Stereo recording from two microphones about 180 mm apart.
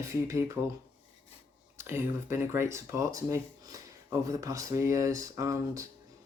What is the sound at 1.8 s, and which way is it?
Speech, 15° right (ahead or behind).